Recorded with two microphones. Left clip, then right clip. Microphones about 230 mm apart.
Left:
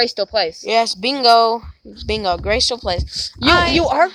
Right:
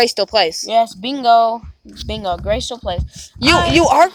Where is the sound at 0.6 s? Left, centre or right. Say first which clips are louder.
Right 1 dB; left.